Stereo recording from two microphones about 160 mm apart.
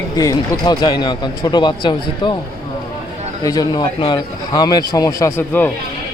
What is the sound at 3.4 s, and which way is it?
A man's voice, 25° left (ahead or behind).